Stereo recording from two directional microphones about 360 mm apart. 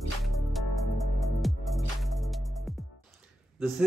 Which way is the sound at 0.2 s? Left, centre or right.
Centre.